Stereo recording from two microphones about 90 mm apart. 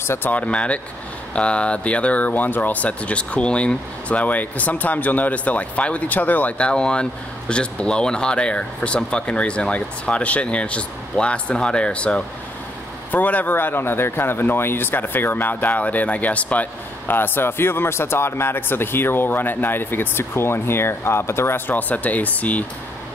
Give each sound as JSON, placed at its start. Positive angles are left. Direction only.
{"t": 0.0, "sound": "speech", "side_deg": 25}